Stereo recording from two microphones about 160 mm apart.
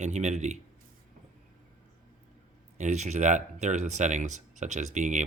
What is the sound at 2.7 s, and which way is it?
Speech, 45° right (ahead or behind).